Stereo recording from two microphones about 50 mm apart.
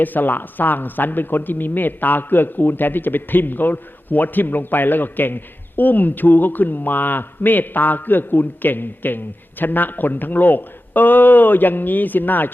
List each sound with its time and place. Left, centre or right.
0.0 s speech: left